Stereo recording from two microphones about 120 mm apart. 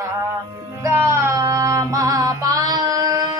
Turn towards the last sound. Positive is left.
turn(degrees=-30)  # may be behind; listen again after turning